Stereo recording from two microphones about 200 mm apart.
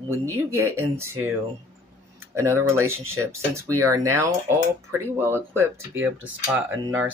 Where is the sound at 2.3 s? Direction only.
10° right (ahead or behind).